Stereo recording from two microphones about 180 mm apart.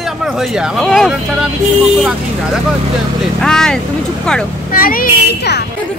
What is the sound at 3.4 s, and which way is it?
Speech, 5° left (ahead or behind).